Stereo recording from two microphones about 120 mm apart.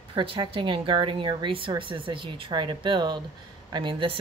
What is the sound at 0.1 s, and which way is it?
Speech, 45° right (ahead or behind).